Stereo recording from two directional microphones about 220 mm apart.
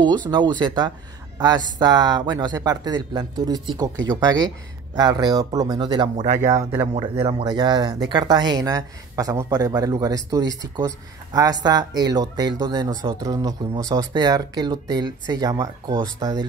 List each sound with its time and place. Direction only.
0.0 s speech: 5° left (ahead or behind)
0.3 s speech: 20° right (ahead or behind)
6.1 s speech: 30° right (ahead or behind)
6.4 s speech: 15° right (ahead or behind)